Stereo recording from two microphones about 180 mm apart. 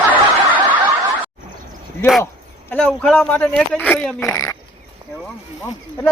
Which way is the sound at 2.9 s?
5° left (ahead or behind).